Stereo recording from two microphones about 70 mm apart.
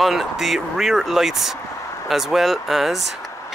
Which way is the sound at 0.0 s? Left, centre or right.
Centre.